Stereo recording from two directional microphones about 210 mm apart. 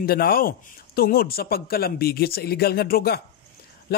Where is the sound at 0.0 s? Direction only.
45° left (ahead or behind).